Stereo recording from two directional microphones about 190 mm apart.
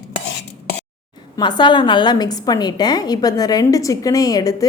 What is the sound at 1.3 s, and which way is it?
A woman's voice, 25° left (ahead or behind).